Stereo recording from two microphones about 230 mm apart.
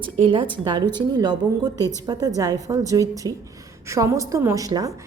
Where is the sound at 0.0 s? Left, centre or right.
Right.